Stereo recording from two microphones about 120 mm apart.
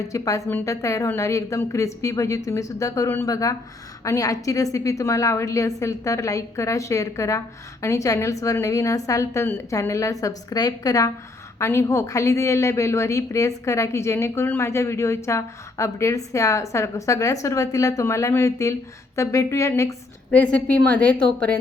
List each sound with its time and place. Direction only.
0.1 s a woman's voice: 25° left (ahead or behind)
20.3 s a woman's voice: 10° left (ahead or behind)